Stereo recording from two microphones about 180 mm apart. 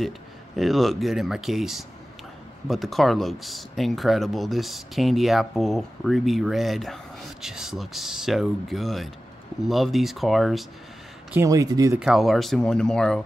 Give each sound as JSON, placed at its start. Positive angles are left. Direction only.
{"t": 0.6, "sound": "speech", "side_deg": 0}
{"t": 11.3, "sound": "speech", "side_deg": -20}
{"t": 12.0, "sound": "speech", "side_deg": 0}